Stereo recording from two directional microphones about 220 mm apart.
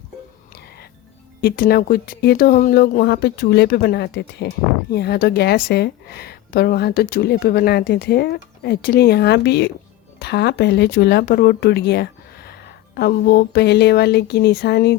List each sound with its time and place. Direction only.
1.4 s speech: 45° left (ahead or behind)